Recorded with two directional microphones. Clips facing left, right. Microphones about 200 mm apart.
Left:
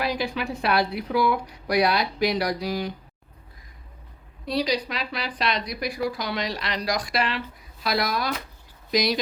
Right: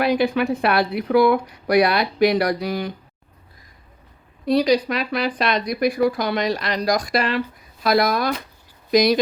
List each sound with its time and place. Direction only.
0.0 s a woman's voice: 55° right (ahead or behind)
4.4 s speech: 50° right (ahead or behind)